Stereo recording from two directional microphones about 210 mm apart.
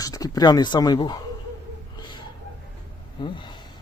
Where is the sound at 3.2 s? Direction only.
20° left (ahead or behind).